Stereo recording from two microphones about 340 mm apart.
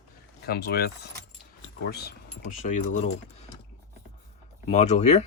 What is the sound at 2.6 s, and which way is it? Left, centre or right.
Speech, left.